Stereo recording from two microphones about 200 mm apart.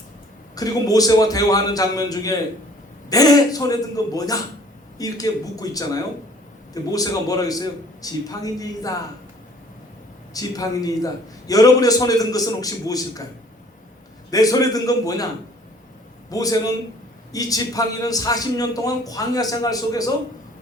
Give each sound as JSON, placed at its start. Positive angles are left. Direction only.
{"t": 0.5, "sound": "a man's voice", "side_deg": 20}
{"t": 10.3, "sound": "a man's voice", "side_deg": 15}
{"t": 14.3, "sound": "a man's voice", "side_deg": 20}
{"t": 16.3, "sound": "a man's voice", "side_deg": 20}